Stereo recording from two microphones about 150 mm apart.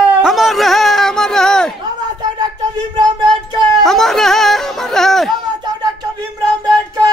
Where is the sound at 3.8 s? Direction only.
Centre (ahead or behind).